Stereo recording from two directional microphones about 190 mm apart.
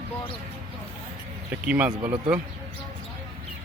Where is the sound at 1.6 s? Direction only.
10° right (ahead or behind).